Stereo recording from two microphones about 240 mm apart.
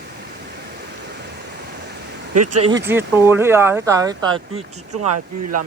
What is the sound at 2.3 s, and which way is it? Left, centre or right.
Speech, right.